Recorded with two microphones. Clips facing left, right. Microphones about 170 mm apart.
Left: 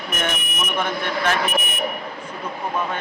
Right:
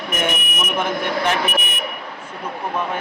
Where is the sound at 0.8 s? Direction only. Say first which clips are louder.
Right 2 dB; 15° right (ahead or behind).